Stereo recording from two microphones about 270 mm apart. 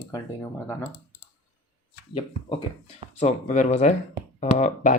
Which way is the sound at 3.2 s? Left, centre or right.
Left.